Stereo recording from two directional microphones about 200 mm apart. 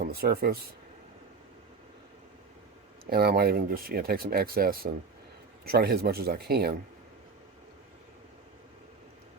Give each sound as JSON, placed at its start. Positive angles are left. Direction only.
{"t": 0.0, "sound": "speech", "side_deg": -50}
{"t": 3.1, "sound": "speech", "side_deg": -50}